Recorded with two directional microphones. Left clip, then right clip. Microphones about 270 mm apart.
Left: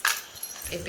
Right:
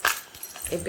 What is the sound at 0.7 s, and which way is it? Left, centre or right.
Speech, right.